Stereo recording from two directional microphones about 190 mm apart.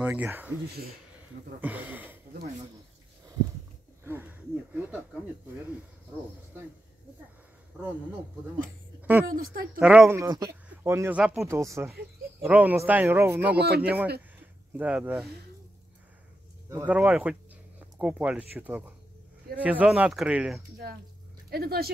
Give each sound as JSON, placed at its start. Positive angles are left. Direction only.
{"t": 0.0, "sound": "speech", "side_deg": -10}
{"t": 1.6, "sound": "speech", "side_deg": -10}
{"t": 4.0, "sound": "speech", "side_deg": -10}
{"t": 9.2, "sound": "speech", "side_deg": -50}
{"t": 9.8, "sound": "speech", "side_deg": -5}
{"t": 13.6, "sound": "speech", "side_deg": -60}
{"t": 14.7, "sound": "speech", "side_deg": -5}
{"t": 16.6, "sound": "speech", "side_deg": -10}
{"t": 21.5, "sound": "speech", "side_deg": -55}